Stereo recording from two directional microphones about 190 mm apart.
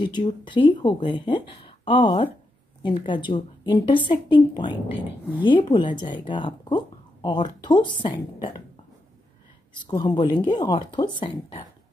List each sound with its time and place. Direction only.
0.0 s speech: 25° left (ahead or behind)
9.8 s speech: 20° left (ahead or behind)